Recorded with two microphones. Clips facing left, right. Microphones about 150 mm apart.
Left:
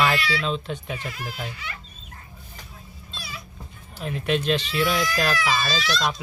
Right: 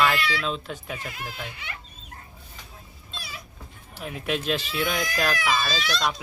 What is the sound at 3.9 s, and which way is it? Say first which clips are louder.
Speech: left 4 dB; 5° right (ahead or behind).